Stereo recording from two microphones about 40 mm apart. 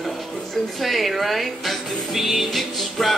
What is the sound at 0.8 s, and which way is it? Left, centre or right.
Speech, centre.